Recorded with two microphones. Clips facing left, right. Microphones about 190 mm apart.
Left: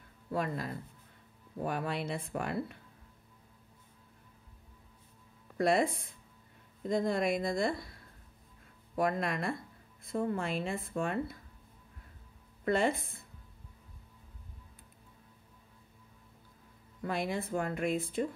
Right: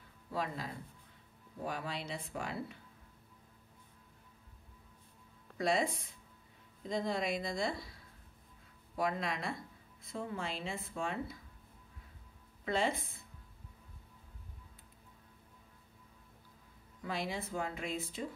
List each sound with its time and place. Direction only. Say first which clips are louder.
0.3 s speech: left 4 dB; 55° left (ahead or behind)
5.6 s speech: left 5 dB; 55° left (ahead or behind)
12.6 s speech: left 5 dB; 55° left (ahead or behind)
17.0 s speech: left 5 dB; 55° left (ahead or behind)